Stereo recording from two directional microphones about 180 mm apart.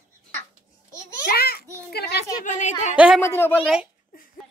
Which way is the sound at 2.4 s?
45° left (ahead or behind).